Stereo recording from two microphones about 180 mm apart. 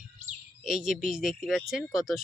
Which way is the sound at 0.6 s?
5° right (ahead or behind).